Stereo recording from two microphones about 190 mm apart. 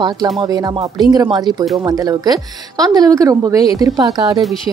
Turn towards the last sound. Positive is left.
turn(degrees=-20)  # may be behind; listen again after turning